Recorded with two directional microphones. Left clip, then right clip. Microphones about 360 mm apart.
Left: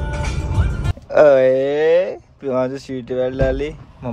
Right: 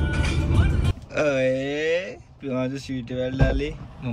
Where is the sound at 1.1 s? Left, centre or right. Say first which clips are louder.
Left 11 dB; centre.